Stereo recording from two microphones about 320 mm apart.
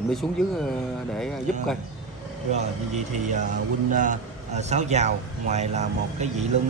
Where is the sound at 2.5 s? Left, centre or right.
Right.